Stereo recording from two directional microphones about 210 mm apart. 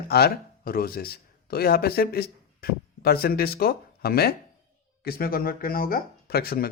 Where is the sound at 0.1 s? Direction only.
45° left (ahead or behind).